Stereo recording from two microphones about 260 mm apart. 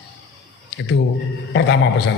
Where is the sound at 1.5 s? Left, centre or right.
Left.